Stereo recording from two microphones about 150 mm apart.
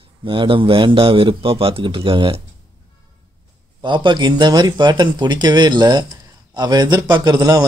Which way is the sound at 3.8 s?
30° right (ahead or behind).